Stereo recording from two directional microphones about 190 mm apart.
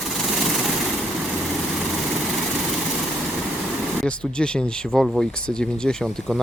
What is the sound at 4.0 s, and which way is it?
Speech, 5° left (ahead or behind).